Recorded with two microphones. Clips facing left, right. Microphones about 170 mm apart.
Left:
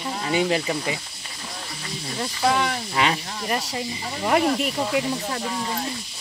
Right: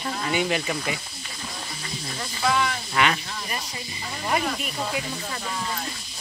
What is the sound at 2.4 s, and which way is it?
Speech, 35° left (ahead or behind).